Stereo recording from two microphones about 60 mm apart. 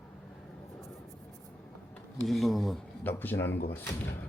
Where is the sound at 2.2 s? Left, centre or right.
Centre.